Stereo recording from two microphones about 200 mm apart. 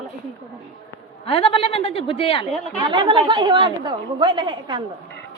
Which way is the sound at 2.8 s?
25° right (ahead or behind).